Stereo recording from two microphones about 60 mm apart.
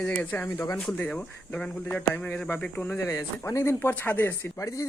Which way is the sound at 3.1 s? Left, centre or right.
Left.